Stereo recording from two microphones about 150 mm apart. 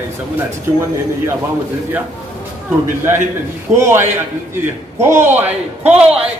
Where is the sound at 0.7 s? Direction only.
20° right (ahead or behind).